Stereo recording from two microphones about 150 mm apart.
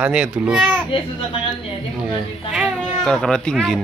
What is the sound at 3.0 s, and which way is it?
Speech, 5° left (ahead or behind).